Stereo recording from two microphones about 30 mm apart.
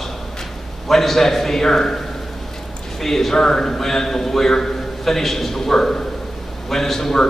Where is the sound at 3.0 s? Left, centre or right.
Centre.